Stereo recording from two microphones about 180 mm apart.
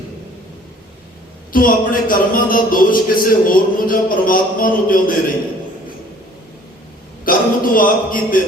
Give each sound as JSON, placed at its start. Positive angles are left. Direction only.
{"t": 1.5, "sound": "a man's voice", "side_deg": 50}
{"t": 7.3, "sound": "a man's voice", "side_deg": 50}